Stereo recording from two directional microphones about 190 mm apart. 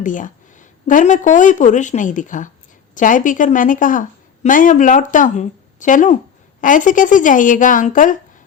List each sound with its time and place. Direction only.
0.0 s speech: 40° left (ahead or behind)